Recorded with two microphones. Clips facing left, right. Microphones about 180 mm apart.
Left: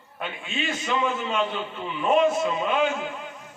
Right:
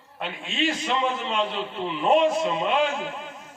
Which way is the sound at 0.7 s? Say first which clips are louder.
Even; 35° right (ahead or behind).